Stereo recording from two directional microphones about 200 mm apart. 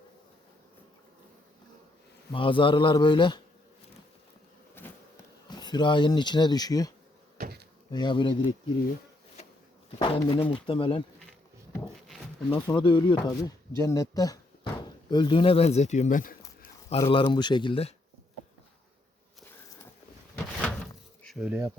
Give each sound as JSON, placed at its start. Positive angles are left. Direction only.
{"t": 2.3, "sound": "speech", "side_deg": 25}
{"t": 4.8, "sound": "insect", "side_deg": 10}
{"t": 5.5, "sound": "speech", "side_deg": 20}
{"t": 7.3, "sound": "a sound", "side_deg": -50}
{"t": 7.9, "sound": "speech", "side_deg": 20}
{"t": 10.0, "sound": "speech", "side_deg": 25}
{"t": 12.0, "sound": "a sound", "side_deg": 5}
{"t": 12.5, "sound": "speech", "side_deg": 25}
{"t": 17.0, "sound": "speech", "side_deg": 20}
{"t": 21.2, "sound": "bee", "side_deg": 0}